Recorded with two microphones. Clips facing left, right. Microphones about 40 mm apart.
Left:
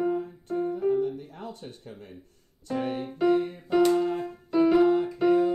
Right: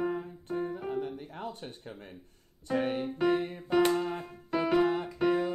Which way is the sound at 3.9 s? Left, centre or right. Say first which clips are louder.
Left 5 dB; centre.